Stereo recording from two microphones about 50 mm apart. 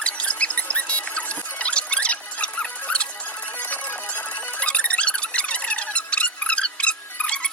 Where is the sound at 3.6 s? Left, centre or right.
Left.